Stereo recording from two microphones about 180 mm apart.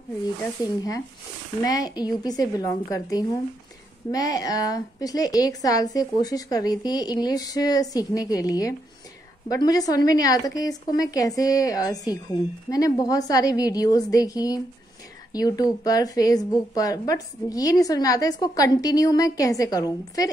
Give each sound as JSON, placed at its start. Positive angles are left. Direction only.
{"t": 0.6, "sound": "speech", "side_deg": 20}